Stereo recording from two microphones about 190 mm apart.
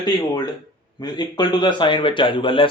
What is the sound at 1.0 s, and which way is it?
A man's voice, 20° left (ahead or behind).